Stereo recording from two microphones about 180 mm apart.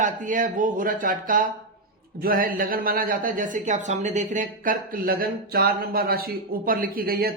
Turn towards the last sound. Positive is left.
turn(degrees=-60)  # may be behind; listen again after turning